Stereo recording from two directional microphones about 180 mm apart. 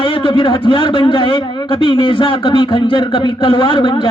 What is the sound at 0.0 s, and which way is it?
A man's voice, 30° left (ahead or behind).